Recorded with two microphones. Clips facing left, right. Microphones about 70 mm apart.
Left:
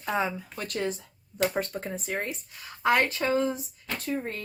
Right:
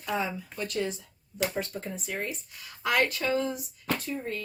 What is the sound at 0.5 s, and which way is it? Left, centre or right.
Speech, left.